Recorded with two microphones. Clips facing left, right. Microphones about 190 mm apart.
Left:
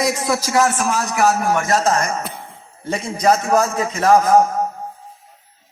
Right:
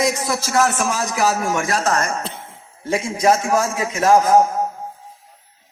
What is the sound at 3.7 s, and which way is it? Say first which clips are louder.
Speech: left 1 dB; 5° right (ahead or behind).